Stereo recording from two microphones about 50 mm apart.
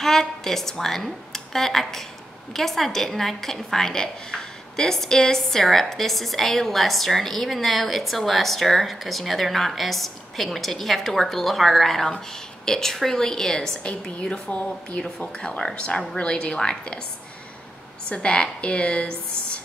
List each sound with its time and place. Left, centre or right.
0.0 s a woman's voice: centre
18.0 s a woman's voice: left